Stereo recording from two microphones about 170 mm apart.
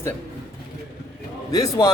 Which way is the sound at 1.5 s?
20° left (ahead or behind).